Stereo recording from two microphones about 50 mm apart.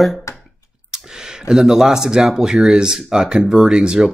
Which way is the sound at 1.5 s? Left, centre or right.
Centre.